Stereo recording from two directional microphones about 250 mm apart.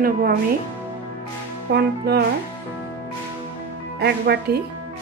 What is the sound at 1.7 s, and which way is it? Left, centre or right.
Speech, right.